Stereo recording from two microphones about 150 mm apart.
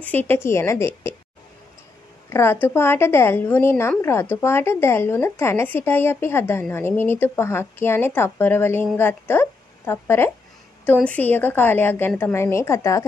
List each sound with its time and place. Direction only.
0.0 s speech: 10° left (ahead or behind)
2.2 s a woman's voice: 15° left (ahead or behind)